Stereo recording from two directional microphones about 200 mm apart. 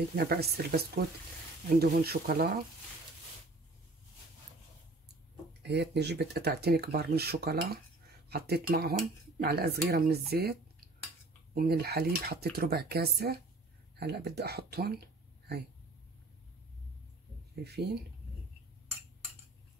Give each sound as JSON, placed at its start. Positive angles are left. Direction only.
{"t": 0.1, "sound": "speech", "side_deg": -50}
{"t": 5.6, "sound": "speech", "side_deg": -55}
{"t": 17.6, "sound": "speech", "side_deg": -55}